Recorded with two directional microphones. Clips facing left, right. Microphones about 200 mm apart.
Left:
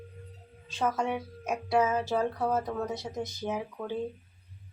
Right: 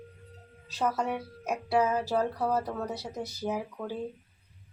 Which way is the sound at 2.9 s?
35° right (ahead or behind).